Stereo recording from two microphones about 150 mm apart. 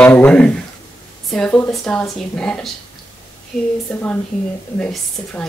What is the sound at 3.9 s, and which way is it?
Speech, 5° left (ahead or behind).